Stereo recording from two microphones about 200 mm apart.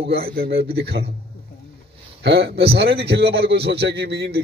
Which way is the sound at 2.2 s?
55° right (ahead or behind).